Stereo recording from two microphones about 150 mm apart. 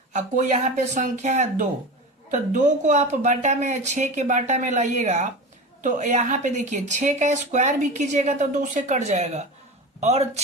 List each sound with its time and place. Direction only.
0.1 s a woman's voice: 55° right (ahead or behind)